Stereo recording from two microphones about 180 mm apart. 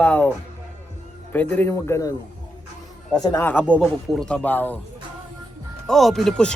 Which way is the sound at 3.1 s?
15° left (ahead or behind).